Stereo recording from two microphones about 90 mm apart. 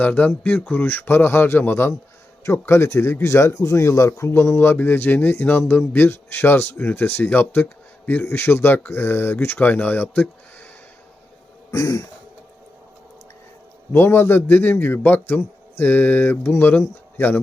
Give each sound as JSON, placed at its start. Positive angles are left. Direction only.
{"t": 0.0, "sound": "speech", "side_deg": 20}
{"t": 11.7, "sound": "throat clearing", "side_deg": 35}
{"t": 13.9, "sound": "speech", "side_deg": 25}